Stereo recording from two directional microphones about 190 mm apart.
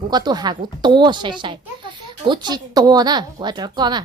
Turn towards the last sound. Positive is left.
turn(degrees=-20)  # may be behind; listen again after turning